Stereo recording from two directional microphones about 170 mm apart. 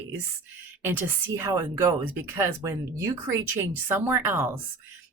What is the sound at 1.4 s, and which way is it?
Speech, 15° right (ahead or behind).